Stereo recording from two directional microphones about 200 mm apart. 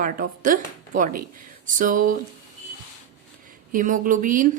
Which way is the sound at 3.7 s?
40° right (ahead or behind).